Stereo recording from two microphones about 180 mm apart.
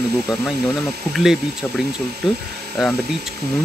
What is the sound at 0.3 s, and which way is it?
Speech, 5° right (ahead or behind).